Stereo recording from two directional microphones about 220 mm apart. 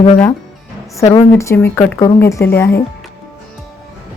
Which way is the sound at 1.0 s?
20° left (ahead or behind).